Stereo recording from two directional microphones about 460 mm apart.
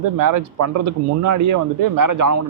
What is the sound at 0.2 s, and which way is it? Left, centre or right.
A man's voice, right.